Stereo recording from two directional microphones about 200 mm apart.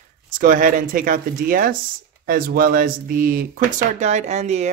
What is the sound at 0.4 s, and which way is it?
Speech, 45° right (ahead or behind).